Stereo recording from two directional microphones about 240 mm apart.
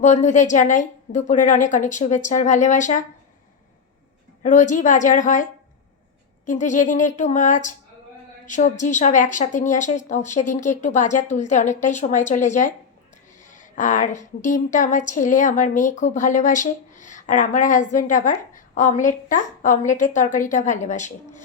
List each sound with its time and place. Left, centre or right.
0.0 s a woman's voice: left
4.4 s a woman's voice: left